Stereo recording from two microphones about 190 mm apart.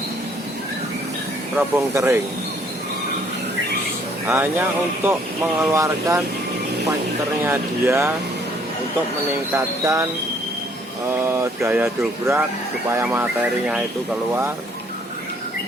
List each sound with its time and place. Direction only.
1.5 s speech: 15° right (ahead or behind)
4.3 s speech: 10° right (ahead or behind)
7.4 s speech: 10° right (ahead or behind)
9.6 s speech: 15° right (ahead or behind)
11.1 s speech: 10° right (ahead or behind)